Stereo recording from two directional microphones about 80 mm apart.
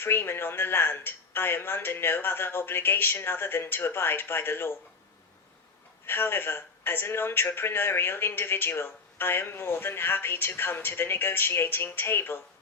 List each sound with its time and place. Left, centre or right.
0.0 s speech: left
6.1 s speech: left